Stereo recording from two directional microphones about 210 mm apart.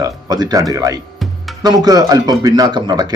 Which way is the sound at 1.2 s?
Centre (ahead or behind).